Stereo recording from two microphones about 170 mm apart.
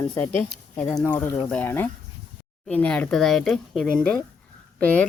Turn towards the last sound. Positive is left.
turn(degrees=10)  # may be behind; listen again after turning